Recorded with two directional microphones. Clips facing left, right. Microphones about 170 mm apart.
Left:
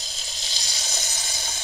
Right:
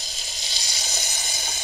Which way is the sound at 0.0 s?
15° right (ahead or behind).